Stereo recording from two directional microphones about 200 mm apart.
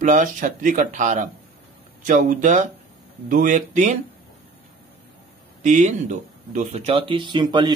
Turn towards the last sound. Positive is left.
turn(degrees=-20)  # may be behind; listen again after turning